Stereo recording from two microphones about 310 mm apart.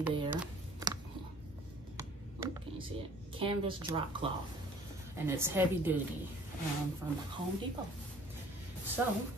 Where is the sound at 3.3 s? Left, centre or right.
Centre.